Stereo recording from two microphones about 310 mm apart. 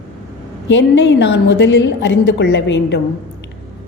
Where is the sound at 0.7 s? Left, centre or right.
Left.